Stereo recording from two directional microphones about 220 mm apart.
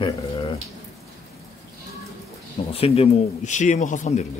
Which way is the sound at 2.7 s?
25° left (ahead or behind).